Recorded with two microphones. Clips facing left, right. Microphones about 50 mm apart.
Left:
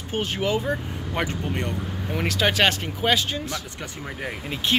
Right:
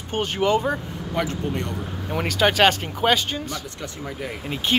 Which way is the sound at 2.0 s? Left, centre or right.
Centre.